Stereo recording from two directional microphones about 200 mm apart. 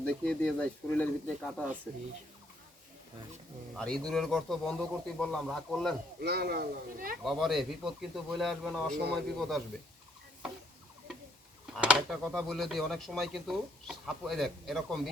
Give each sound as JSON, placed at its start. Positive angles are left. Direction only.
{"t": 0.0, "sound": "speech", "side_deg": 5}
{"t": 3.8, "sound": "speech", "side_deg": 5}
{"t": 6.1, "sound": "speech", "side_deg": -50}
{"t": 7.3, "sound": "speech", "side_deg": 0}
{"t": 11.8, "sound": "speech", "side_deg": -5}